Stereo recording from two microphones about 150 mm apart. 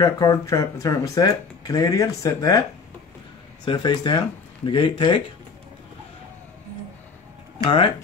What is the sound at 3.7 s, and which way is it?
Speech, 30° left (ahead or behind).